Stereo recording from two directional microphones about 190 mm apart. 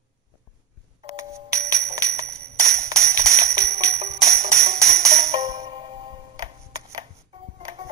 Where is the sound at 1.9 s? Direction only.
15° right (ahead or behind).